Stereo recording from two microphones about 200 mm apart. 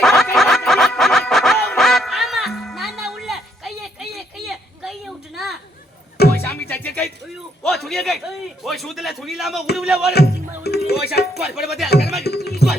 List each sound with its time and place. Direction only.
0.0 s a sound: centre (ahead or behind)
0.3 s music: centre (ahead or behind)
4.4 s a sound: centre (ahead or behind)
6.3 s music: 10° left (ahead or behind)
7.6 s a sound: centre (ahead or behind)
9.7 s music: centre (ahead or behind)
10.1 s music: 55° left (ahead or behind)
11.3 s music: centre (ahead or behind)
11.9 s music: 55° left (ahead or behind)